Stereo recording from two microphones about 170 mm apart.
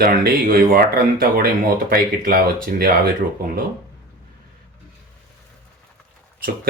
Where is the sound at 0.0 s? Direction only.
60° right (ahead or behind).